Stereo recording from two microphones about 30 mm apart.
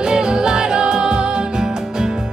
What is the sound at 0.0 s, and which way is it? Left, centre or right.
Music, right.